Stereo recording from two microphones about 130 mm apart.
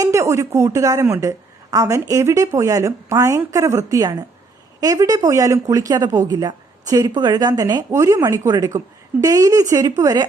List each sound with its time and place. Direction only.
0.0 s speech: 20° right (ahead or behind)